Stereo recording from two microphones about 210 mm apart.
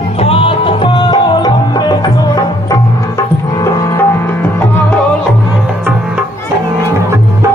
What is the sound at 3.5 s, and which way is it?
Music, 15° left (ahead or behind).